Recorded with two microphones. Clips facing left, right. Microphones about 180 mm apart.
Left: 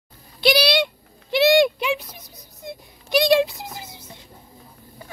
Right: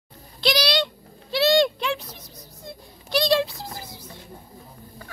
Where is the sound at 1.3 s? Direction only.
15° left (ahead or behind).